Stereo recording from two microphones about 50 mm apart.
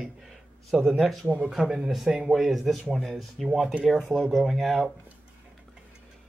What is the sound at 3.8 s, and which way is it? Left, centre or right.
Speech, centre.